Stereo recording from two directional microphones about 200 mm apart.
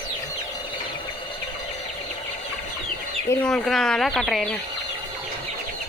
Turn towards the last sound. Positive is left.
turn(degrees=0)  # may be behind; listen again after turning